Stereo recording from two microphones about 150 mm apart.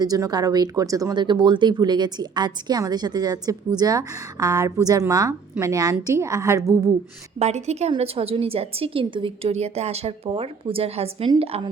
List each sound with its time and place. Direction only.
0.0 s speech: 25° right (ahead or behind)
7.3 s a woman's voice: 45° right (ahead or behind)